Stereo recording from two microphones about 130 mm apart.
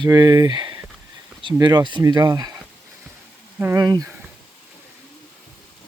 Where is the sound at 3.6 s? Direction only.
25° right (ahead or behind).